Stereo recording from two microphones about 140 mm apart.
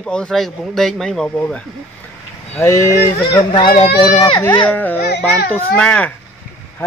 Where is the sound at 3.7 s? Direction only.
40° left (ahead or behind).